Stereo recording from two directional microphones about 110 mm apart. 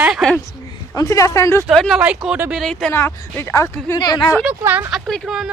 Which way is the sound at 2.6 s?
5° left (ahead or behind).